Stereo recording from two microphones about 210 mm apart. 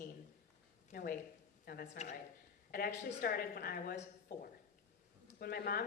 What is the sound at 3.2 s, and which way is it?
A woman's voice, 45° left (ahead or behind).